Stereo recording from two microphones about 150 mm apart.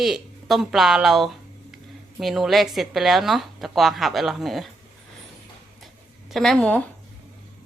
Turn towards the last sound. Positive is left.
turn(degrees=5)  # may be behind; listen again after turning